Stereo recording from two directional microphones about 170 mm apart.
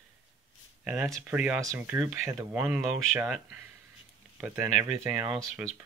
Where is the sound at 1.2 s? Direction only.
5° right (ahead or behind).